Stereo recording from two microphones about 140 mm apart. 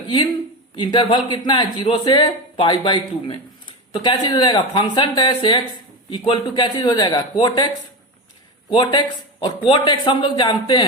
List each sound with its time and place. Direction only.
0.8 s speech: 35° left (ahead or behind)
8.7 s speech: 35° left (ahead or behind)